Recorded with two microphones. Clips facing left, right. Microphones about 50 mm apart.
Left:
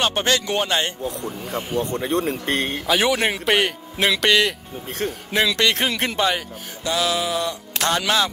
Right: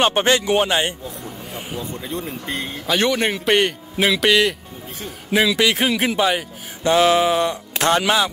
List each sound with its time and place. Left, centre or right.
0.0 s speech: right
1.8 s speech: left
2.9 s a man's voice: centre
6.8 s mantra: right
7.8 s speech: right